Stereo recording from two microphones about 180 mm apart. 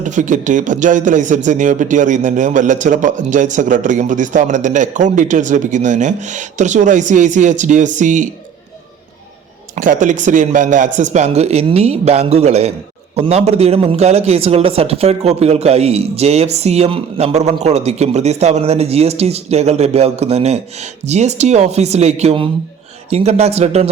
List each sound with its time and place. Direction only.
0.0 s speech: 45° right (ahead or behind)
9.7 s a man's voice: 45° right (ahead or behind)